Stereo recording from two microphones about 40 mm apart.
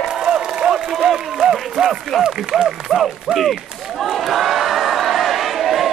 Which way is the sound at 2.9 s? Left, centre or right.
Centre.